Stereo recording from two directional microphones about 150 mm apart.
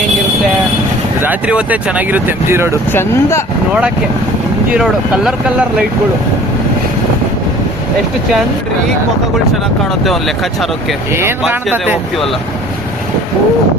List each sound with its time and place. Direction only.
1.2 s speech: 10° right (ahead or behind)
2.9 s speech: 15° left (ahead or behind)
3.7 s speech: 10° right (ahead or behind)
10.0 s speech: centre (ahead or behind)
11.1 s speech: 15° right (ahead or behind)